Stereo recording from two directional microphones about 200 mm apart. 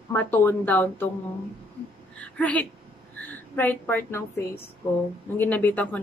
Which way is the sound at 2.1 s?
5° left (ahead or behind).